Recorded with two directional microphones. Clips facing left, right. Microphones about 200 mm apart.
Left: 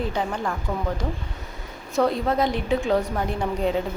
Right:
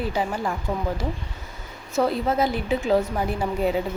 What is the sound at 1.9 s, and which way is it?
A woman's voice, 5° right (ahead or behind).